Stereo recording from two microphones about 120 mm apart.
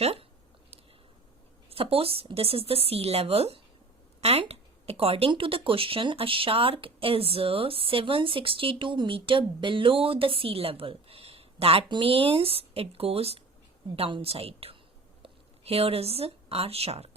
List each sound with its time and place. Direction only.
0.0 s speech: 55° right (ahead or behind)
1.7 s a woman's voice: 50° right (ahead or behind)